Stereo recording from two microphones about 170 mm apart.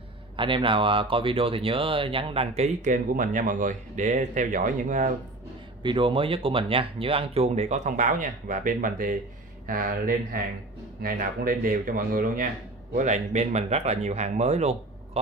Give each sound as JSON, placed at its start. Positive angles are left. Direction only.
{"t": 0.4, "sound": "speech", "side_deg": -30}
{"t": 5.8, "sound": "speech", "side_deg": -30}
{"t": 12.9, "sound": "speech", "side_deg": -45}